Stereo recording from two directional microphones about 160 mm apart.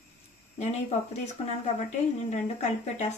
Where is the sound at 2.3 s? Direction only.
45° left (ahead or behind).